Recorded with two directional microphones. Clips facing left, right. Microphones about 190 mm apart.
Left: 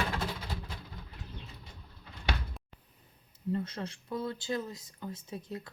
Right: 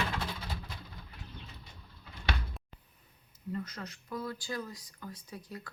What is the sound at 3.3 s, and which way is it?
Speech, 30° left (ahead or behind).